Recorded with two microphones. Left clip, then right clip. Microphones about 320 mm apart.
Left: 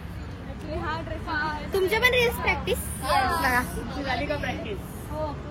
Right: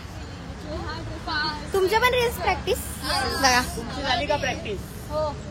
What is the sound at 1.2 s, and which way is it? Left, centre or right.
A woman's voice, centre.